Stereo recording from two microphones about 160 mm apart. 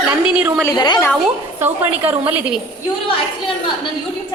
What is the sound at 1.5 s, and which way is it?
A woman's voice, 10° right (ahead or behind).